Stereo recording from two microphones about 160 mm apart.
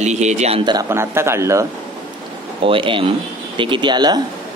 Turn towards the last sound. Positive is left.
turn(degrees=-30)  # may be behind; listen again after turning